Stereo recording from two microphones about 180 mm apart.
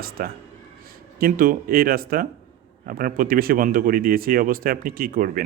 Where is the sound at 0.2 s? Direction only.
60° right (ahead or behind).